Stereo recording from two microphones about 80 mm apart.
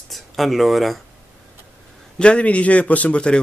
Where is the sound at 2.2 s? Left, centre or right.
Centre.